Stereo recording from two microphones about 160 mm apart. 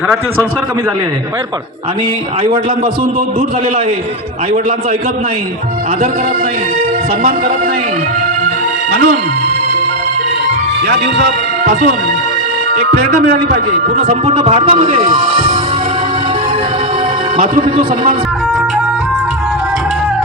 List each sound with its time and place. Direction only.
7.2 s a man's voice: 70° right (ahead or behind)
10.8 s speech: 90° right
14.1 s speech: 40° right (ahead or behind)
17.5 s a man's voice: 50° right (ahead or behind)